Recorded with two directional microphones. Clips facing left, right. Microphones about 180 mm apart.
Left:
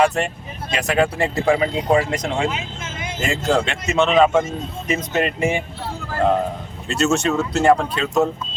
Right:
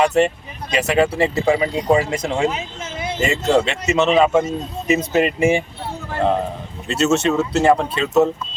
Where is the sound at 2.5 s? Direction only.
35° right (ahead or behind).